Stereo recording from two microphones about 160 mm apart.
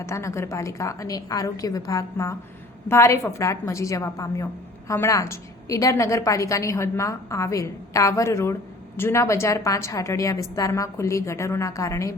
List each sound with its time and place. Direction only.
0.0 s a woman's voice: 20° left (ahead or behind)